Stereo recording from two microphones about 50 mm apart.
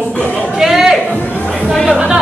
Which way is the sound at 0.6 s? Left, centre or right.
Centre.